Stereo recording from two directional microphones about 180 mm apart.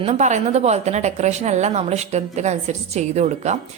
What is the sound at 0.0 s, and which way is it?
A woman's voice, 40° right (ahead or behind).